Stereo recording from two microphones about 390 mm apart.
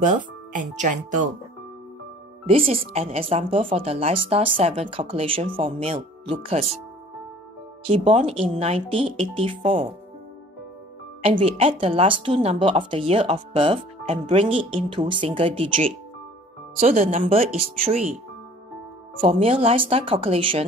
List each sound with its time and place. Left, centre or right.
0.0 s speech: centre
2.4 s speech: centre
7.9 s speech: centre
11.2 s speech: centre
19.2 s speech: centre